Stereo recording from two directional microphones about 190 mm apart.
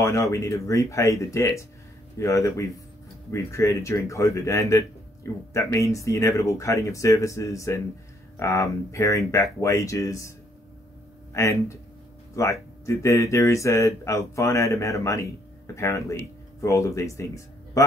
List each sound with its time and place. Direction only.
0.0 s speech: 15° left (ahead or behind)
11.3 s speech: 15° left (ahead or behind)